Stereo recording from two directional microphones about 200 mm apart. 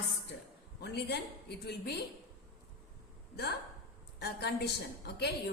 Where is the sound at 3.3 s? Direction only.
55° left (ahead or behind).